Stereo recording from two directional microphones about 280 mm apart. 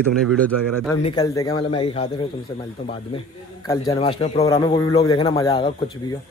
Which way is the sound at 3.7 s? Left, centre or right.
Centre.